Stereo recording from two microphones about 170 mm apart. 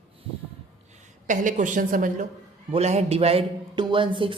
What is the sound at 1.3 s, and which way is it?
Speech, 50° right (ahead or behind).